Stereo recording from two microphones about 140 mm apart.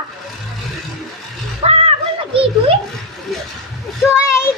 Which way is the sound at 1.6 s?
45° right (ahead or behind).